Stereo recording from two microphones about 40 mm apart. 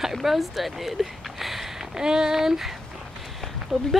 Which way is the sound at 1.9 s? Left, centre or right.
Centre.